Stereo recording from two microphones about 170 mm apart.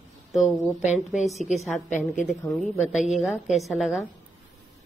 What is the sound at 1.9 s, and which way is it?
Speech, 45° left (ahead or behind).